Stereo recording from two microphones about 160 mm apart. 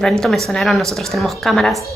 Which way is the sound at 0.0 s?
5° left (ahead or behind).